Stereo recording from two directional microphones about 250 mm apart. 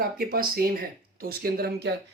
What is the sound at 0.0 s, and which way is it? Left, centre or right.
Speech, right.